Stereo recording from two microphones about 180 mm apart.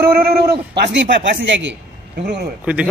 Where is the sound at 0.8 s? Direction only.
75° right (ahead or behind).